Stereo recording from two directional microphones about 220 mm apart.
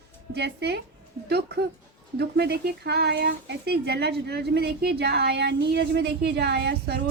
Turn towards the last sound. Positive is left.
turn(degrees=-50)  # may be behind; listen again after turning